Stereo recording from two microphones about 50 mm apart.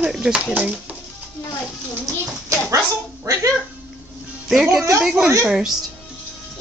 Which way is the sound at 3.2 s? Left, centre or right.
Right.